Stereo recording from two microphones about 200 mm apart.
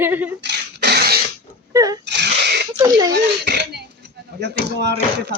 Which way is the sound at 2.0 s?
60° right (ahead or behind).